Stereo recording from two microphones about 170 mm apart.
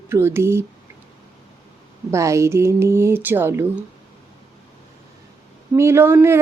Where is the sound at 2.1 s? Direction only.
15° right (ahead or behind).